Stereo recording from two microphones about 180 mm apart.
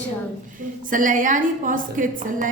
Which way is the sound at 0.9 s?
45° right (ahead or behind).